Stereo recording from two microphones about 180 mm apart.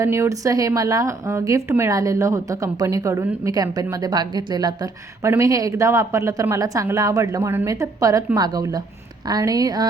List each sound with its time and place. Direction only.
0.0 s a woman's voice: 15° right (ahead or behind)